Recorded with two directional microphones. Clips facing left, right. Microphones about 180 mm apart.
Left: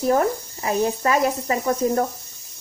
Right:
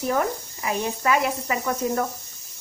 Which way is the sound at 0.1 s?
35° left (ahead or behind).